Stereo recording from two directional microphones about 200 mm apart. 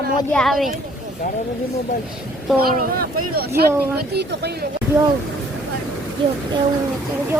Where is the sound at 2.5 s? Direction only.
50° right (ahead or behind).